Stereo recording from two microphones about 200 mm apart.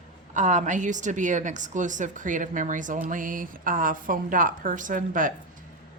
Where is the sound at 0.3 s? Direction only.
40° right (ahead or behind).